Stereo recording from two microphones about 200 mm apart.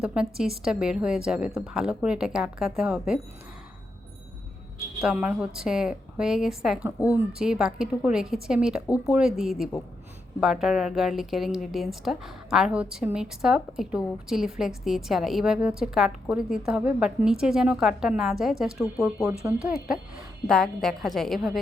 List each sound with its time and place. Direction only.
0.0 s a woman's voice: 5° right (ahead or behind)
4.9 s a woman's voice: 5° right (ahead or behind)